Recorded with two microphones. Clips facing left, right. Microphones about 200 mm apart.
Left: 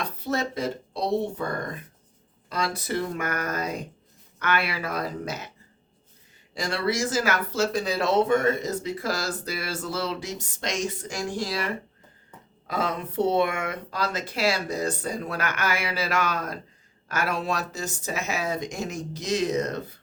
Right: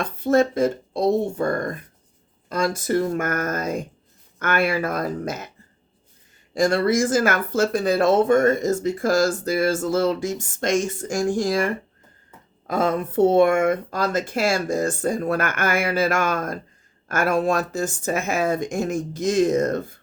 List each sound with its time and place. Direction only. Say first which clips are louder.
0.0 s speech: right 9 dB; 50° right (ahead or behind)
6.5 s speech: right 8 dB; 50° right (ahead or behind)